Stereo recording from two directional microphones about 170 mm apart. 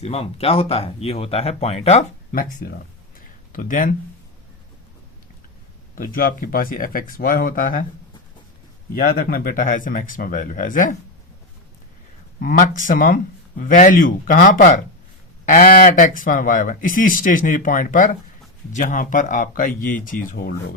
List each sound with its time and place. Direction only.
0.0 s speech: 35° left (ahead or behind)
2.3 s speech: 55° left (ahead or behind)
3.2 s a sound: 55° left (ahead or behind)
6.0 s speech: 55° left (ahead or behind)
9.0 s speech: 55° left (ahead or behind)
12.4 s speech: 50° left (ahead or behind)